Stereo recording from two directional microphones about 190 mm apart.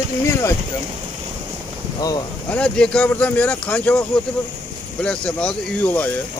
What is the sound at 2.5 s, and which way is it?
Speech, 5° left (ahead or behind).